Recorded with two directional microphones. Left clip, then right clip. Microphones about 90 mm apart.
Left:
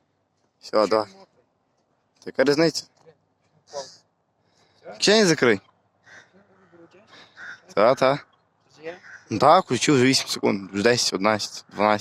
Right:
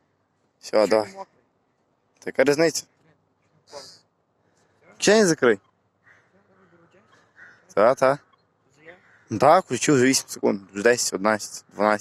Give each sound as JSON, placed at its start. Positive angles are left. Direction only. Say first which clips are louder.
{"t": 0.6, "sound": "speech", "louder": "right 1 dB", "side_deg": -5}
{"t": 2.1, "sound": "speech", "louder": "even", "side_deg": 45}
{"t": 4.6, "sound": "speech", "louder": "even", "side_deg": 30}
{"t": 6.1, "sound": "a sound", "louder": "left 7 dB", "side_deg": 25}
{"t": 6.8, "sound": "a sound", "louder": "left 7 dB", "side_deg": 35}
{"t": 8.7, "sound": "a sound", "louder": "left 11 dB", "side_deg": 35}
{"t": 9.4, "sound": "speech", "louder": "left 1 dB", "side_deg": 15}
{"t": 10.4, "sound": "speech", "louder": "even", "side_deg": 35}
{"t": 10.7, "sound": "speech", "louder": "even", "side_deg": 20}